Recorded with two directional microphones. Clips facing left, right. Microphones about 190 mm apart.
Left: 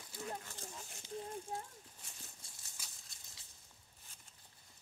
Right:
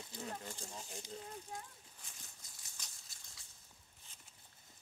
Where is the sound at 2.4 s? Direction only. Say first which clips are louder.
Left 1 dB; 30° left (ahead or behind).